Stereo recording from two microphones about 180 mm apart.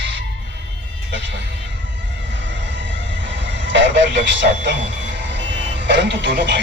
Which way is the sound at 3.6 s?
80° right.